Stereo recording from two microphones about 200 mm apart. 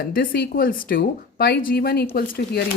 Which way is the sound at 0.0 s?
45° left (ahead or behind).